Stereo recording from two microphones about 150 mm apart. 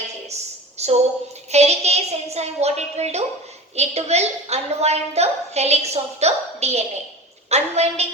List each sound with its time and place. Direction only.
0.8 s a woman's voice: 45° right (ahead or behind)